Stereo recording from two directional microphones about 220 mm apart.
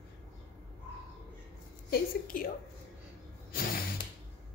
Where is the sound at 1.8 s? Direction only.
40° left (ahead or behind).